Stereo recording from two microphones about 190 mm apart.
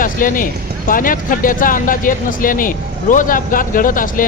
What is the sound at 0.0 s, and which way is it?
Speech, 45° left (ahead or behind).